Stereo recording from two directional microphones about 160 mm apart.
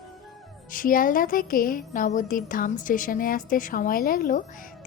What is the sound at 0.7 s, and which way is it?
A woman's voice, 60° left (ahead or behind).